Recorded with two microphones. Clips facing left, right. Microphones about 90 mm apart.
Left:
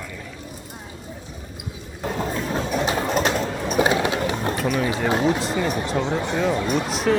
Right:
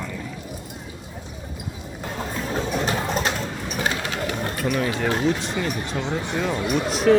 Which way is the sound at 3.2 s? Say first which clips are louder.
Left 4 dB; 35° left (ahead or behind).